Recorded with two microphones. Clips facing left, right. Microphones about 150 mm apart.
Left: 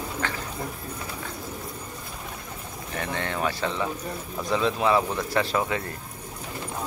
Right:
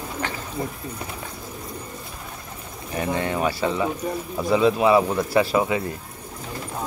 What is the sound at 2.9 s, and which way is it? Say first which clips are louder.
Speech: right 5 dB; 10° right (ahead or behind).